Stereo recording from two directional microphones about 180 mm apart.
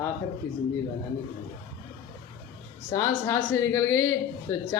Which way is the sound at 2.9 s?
15° left (ahead or behind).